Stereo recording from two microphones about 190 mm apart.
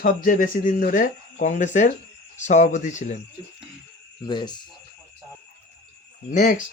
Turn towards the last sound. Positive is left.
turn(degrees=40)  # may be behind; listen again after turning